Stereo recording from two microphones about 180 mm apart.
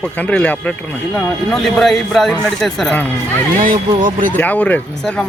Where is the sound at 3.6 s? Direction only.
50° right (ahead or behind).